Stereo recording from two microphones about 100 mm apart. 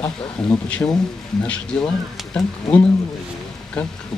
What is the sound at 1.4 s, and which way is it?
Speech, 10° left (ahead or behind).